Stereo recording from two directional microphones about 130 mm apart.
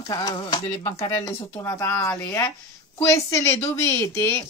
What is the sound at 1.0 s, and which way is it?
Speech, 20° left (ahead or behind).